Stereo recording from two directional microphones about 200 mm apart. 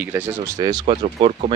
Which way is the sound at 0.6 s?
20° right (ahead or behind).